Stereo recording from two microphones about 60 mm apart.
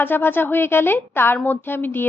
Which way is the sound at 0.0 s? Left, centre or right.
Left.